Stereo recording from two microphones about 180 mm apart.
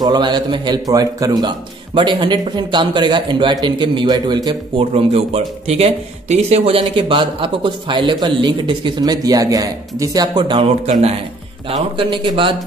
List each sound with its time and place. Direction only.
0.0 s a man's voice: 25° right (ahead or behind)